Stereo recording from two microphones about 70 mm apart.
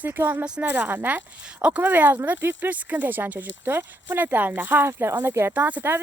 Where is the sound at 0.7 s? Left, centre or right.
Right.